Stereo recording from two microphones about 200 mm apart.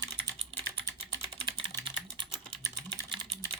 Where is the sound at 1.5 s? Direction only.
25° right (ahead or behind).